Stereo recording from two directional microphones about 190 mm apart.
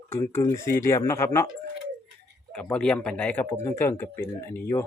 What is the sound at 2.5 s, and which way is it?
Speech, 5° left (ahead or behind).